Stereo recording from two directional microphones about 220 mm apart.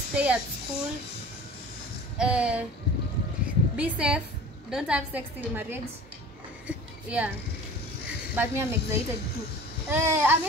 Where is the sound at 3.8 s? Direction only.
5° right (ahead or behind).